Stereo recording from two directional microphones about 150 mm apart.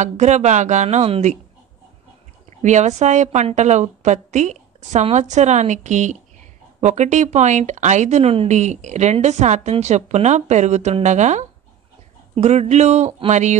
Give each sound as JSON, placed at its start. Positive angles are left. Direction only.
{"t": 0.0, "sound": "a woman's voice", "side_deg": -50}
{"t": 2.6, "sound": "a woman's voice", "side_deg": -50}